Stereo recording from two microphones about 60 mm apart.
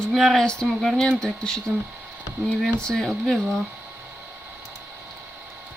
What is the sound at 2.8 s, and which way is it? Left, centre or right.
Speech, centre.